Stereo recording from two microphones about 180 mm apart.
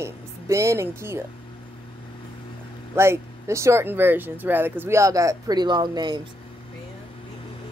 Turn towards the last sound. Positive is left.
turn(degrees=-25)  # may be behind; listen again after turning